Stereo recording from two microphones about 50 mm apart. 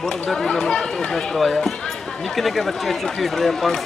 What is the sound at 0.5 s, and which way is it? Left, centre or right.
Speech, centre.